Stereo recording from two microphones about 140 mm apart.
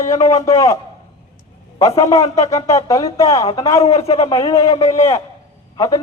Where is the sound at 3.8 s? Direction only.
45° left (ahead or behind).